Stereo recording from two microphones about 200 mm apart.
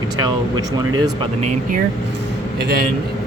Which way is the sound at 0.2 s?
20° right (ahead or behind).